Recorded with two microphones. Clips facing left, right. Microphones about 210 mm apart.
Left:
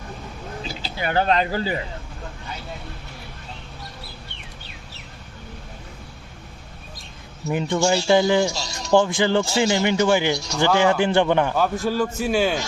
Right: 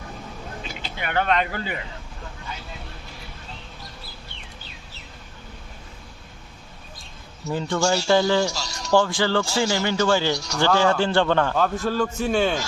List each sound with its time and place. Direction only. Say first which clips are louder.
0.6 s speech: left 6 dB; 35° left (ahead or behind)
7.4 s a man's voice: left 2 dB; 20° left (ahead or behind)